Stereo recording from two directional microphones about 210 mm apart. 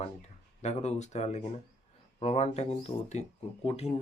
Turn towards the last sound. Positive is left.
turn(degrees=30)  # may be behind; listen again after turning